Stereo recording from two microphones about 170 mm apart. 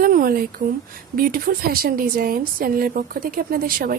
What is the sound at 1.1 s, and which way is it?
A woman's voice, 60° right (ahead or behind).